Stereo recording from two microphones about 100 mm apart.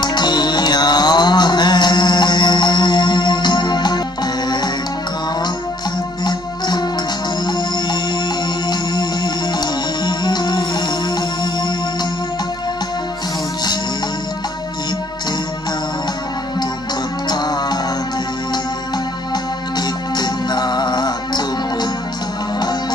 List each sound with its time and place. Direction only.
0.0 s music: 45° left (ahead or behind)
7.4 s music: 45° left (ahead or behind)
17.3 s music: 45° left (ahead or behind)
20.2 s music: 45° left (ahead or behind)